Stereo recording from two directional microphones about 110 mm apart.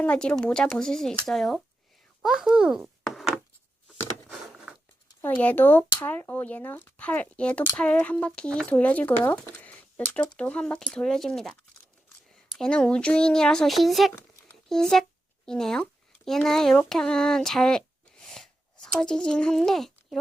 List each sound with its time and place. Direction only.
0.0 s speech: 10° left (ahead or behind)
2.2 s a sound: 5° right (ahead or behind)
5.2 s speech: 15° left (ahead or behind)